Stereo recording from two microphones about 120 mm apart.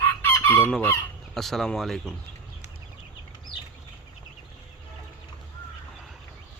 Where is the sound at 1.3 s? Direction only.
Centre (ahead or behind).